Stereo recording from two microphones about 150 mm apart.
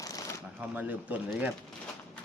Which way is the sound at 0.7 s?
10° right (ahead or behind).